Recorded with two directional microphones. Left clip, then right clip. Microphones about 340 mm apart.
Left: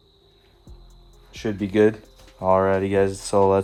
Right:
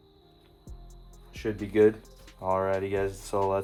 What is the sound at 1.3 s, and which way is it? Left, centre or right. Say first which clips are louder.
Speech: left 5 dB; left.